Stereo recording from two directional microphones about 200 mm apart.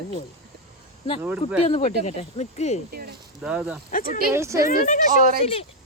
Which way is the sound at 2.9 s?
50° right (ahead or behind).